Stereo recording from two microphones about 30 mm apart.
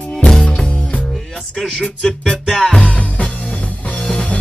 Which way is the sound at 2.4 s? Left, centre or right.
Centre.